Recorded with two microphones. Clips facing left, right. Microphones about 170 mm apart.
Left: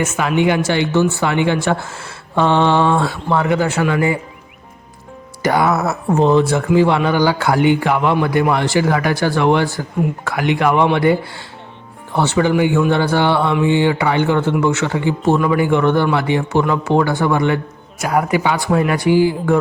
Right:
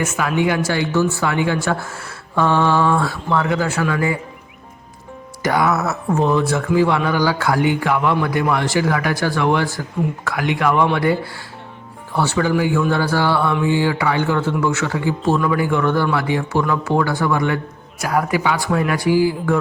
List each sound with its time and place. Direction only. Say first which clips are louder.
0.0 s a man's voice: left 3 dB; 25° left (ahead or behind)
5.4 s a man's voice: left 2 dB; 30° left (ahead or behind)
12.1 s a man's voice: left 3 dB; 20° left (ahead or behind)